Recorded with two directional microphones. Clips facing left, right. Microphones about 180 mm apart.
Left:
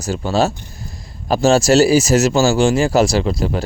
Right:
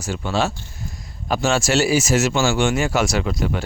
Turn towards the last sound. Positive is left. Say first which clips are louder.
# left 4 dB
turn(degrees=30)  # may be behind; listen again after turning